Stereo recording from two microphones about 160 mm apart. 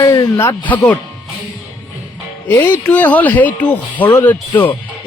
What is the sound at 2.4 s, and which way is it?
Speech, 15° left (ahead or behind).